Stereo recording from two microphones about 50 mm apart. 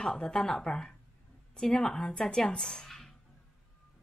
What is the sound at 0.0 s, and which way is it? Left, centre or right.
Speech, centre.